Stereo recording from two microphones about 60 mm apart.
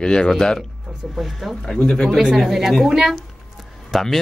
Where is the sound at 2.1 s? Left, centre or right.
Centre.